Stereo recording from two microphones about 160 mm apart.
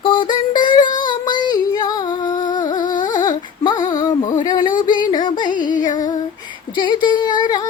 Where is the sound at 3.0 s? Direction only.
55° left (ahead or behind).